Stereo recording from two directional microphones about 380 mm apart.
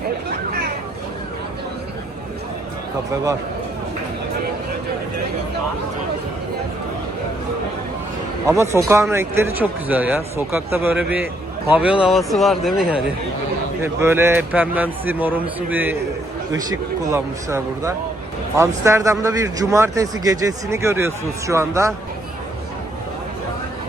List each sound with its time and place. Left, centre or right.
8.4 s a man's voice: centre